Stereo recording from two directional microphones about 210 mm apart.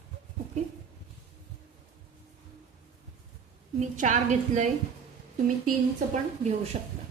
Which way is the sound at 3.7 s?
35° right (ahead or behind).